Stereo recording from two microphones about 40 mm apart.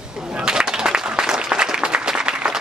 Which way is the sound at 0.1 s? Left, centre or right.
Centre.